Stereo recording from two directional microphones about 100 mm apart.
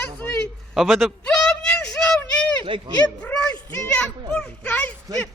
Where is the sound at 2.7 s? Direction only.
60° right (ahead or behind).